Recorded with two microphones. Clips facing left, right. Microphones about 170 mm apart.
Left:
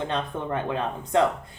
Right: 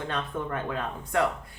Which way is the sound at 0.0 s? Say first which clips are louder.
Left 3 dB; 20° left (ahead or behind).